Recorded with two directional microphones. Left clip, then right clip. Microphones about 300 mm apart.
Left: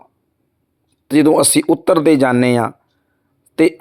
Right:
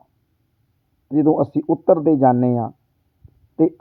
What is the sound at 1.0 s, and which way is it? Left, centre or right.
Speech, left.